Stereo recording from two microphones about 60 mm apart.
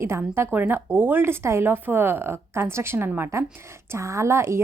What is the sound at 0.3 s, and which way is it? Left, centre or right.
A woman's voice, right.